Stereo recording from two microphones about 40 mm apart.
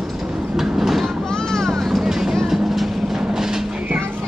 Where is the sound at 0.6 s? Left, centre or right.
Centre.